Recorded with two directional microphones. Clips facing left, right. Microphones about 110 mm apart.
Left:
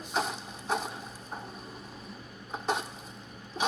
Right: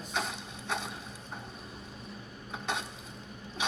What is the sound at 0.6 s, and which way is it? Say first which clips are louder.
Boat: left 4 dB; 40° left (ahead or behind).